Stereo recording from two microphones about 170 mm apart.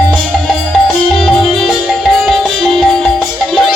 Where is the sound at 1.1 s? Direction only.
5° left (ahead or behind).